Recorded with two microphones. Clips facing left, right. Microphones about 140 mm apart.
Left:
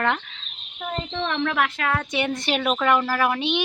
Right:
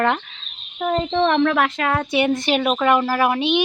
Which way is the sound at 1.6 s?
30° right (ahead or behind).